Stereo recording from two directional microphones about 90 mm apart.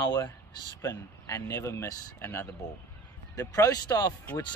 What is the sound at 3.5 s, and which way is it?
Speech, 45° left (ahead or behind).